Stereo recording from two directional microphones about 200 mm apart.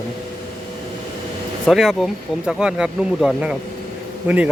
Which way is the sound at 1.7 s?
Centre (ahead or behind).